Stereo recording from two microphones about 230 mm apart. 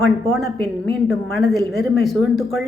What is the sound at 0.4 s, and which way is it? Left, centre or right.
Speech, left.